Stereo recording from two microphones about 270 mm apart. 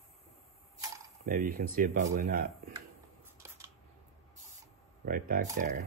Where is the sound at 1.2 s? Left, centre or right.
Right.